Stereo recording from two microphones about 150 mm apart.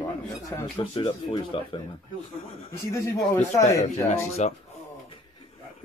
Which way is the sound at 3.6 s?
20° left (ahead or behind).